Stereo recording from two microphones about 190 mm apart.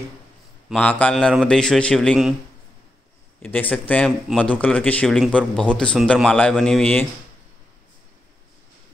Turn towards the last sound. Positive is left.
turn(degrees=5)  # may be behind; listen again after turning